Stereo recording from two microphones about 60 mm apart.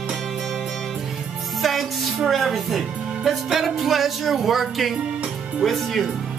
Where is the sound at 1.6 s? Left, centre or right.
Centre.